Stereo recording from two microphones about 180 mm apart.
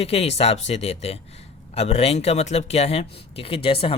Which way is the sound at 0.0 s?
35° left (ahead or behind).